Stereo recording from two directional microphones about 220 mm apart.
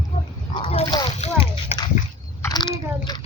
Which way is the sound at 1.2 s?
30° left (ahead or behind).